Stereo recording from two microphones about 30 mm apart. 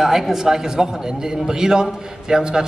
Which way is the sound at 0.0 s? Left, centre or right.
Centre.